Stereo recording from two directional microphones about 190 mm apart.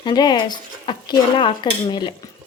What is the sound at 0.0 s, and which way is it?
Speech, 25° left (ahead or behind).